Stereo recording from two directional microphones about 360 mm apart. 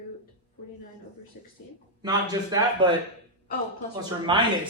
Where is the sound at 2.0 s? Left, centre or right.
Centre.